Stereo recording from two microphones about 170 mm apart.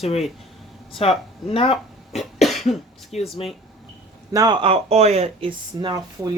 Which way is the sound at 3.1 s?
35° left (ahead or behind).